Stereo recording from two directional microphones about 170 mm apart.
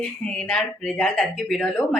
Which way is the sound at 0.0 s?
5° left (ahead or behind).